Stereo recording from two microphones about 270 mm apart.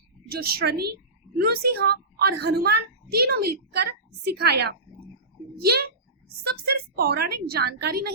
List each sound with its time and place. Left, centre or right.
0.3 s a child's voice: right